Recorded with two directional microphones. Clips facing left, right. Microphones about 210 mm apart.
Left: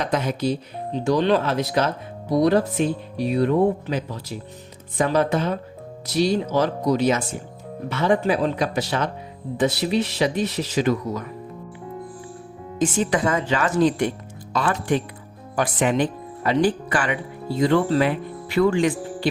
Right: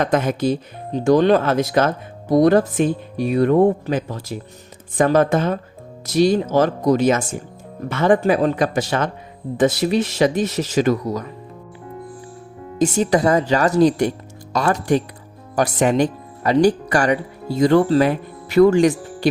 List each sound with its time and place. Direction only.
0.0 s speech: 50° right (ahead or behind)
12.8 s speech: 40° right (ahead or behind)